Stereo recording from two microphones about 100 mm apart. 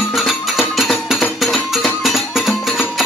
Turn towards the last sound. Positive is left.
turn(degrees=0)  # may be behind; listen again after turning